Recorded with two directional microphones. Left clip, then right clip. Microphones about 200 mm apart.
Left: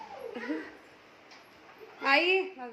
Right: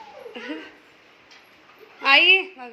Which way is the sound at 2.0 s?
Centre (ahead or behind).